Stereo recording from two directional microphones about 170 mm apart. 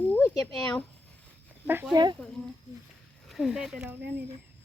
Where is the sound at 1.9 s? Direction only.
25° right (ahead or behind).